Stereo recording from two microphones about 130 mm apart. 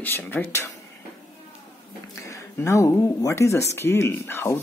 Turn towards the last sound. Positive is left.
turn(degrees=20)  # may be behind; listen again after turning